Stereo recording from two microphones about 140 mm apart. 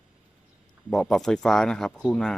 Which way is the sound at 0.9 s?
5° left (ahead or behind).